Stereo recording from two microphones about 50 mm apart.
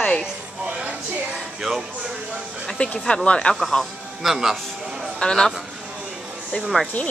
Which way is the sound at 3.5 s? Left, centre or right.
Centre.